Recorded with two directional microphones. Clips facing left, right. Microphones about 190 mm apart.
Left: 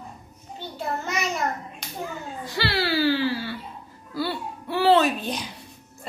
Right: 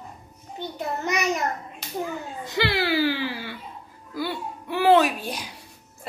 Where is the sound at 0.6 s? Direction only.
20° right (ahead or behind).